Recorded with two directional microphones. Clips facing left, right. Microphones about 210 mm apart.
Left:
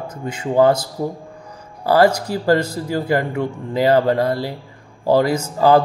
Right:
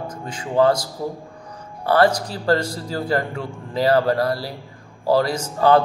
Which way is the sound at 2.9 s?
20° left (ahead or behind).